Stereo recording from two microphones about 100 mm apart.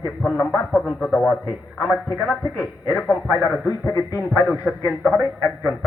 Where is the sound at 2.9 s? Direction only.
10° left (ahead or behind).